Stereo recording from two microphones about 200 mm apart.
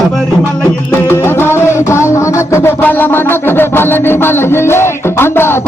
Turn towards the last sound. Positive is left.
turn(degrees=10)  # may be behind; listen again after turning